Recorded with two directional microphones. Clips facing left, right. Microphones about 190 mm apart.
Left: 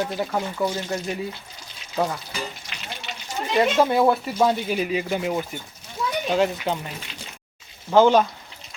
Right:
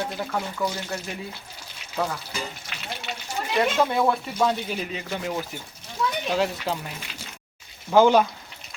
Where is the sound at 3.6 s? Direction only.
5° left (ahead or behind).